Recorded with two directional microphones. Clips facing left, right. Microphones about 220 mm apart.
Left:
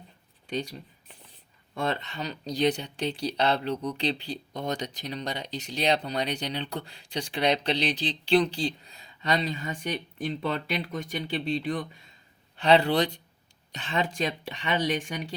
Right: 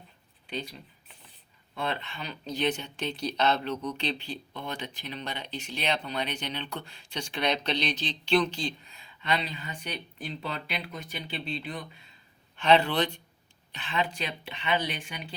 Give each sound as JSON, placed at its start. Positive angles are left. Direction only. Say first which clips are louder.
{"t": 0.5, "sound": "speech", "louder": "left 5 dB", "side_deg": 40}
{"t": 12.5, "sound": "speech", "louder": "left 2 dB", "side_deg": 35}